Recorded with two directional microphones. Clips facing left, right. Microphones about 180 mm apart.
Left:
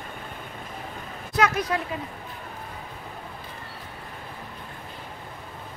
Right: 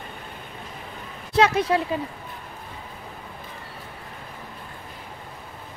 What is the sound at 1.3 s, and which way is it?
Speech, 30° right (ahead or behind).